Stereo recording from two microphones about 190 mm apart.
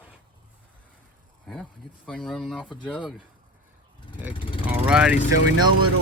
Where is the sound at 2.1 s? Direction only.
5° left (ahead or behind).